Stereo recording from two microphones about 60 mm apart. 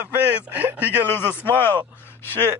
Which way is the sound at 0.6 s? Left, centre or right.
Right.